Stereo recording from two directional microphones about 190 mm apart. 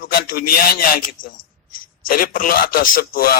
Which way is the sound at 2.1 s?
50° left (ahead or behind).